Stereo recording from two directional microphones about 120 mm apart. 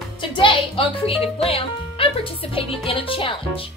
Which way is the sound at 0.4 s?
45° left (ahead or behind).